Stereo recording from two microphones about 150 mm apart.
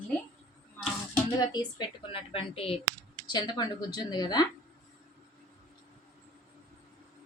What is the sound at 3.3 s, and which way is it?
Speech, 30° left (ahead or behind).